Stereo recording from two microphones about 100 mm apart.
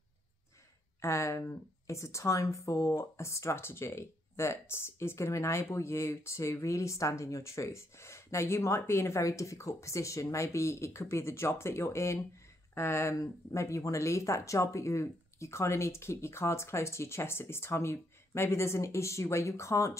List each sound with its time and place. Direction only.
1.0 s speech: 30° left (ahead or behind)